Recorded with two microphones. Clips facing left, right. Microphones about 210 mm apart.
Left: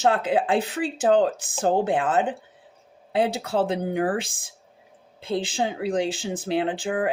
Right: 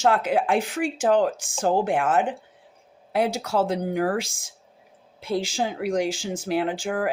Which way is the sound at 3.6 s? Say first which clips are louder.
Even; 25° left (ahead or behind).